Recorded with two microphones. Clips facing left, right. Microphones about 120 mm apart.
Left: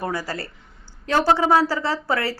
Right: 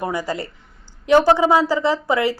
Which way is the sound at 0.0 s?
15° right (ahead or behind).